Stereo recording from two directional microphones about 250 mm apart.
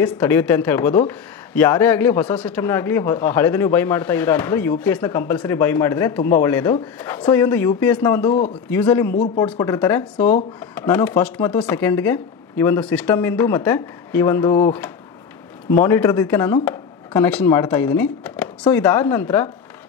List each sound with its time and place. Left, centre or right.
0.0 s speech: centre
9.1 s speech: left
9.4 s speech: centre